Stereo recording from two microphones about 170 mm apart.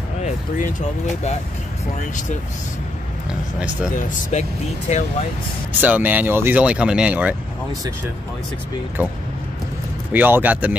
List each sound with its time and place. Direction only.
0.2 s speech: 45° left (ahead or behind)
3.9 s speech: 45° left (ahead or behind)
5.8 s speech: 10° right (ahead or behind)
10.1 s speech: 10° right (ahead or behind)